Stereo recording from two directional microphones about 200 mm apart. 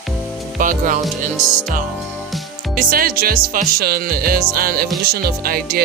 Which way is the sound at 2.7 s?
45° right (ahead or behind).